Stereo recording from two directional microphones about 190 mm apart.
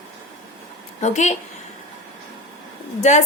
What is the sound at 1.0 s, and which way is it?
Speech, 40° left (ahead or behind).